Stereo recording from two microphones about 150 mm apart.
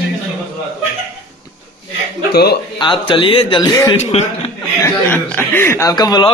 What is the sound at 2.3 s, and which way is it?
Speech, 90° left.